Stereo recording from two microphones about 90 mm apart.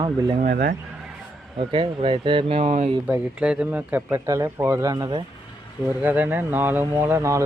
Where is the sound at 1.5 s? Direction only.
80° right.